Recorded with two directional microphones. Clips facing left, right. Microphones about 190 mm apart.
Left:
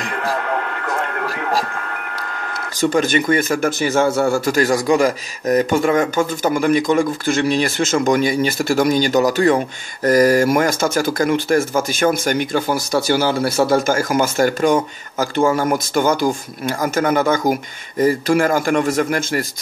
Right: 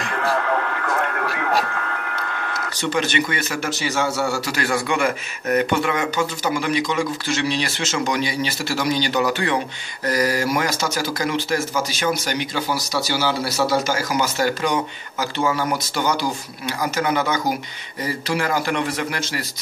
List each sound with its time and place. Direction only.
0.0 s radio: 15° left (ahead or behind)
1.2 s a sound: 15° left (ahead or behind)
2.8 s speech: 50° left (ahead or behind)